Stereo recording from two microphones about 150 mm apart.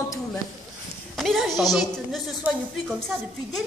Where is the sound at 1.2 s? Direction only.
Centre (ahead or behind).